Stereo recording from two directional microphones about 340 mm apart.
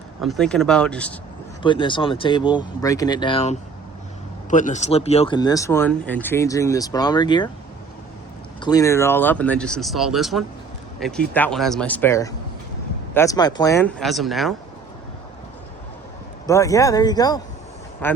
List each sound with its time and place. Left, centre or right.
0.2 s speech: centre
1.6 s speech: centre
8.6 s speech: centre
16.5 s speech: centre